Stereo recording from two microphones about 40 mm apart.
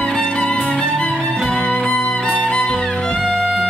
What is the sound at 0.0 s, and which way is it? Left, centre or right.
Music, left.